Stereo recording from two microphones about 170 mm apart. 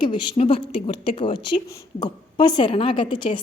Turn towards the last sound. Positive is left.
turn(degrees=30)  # may be behind; listen again after turning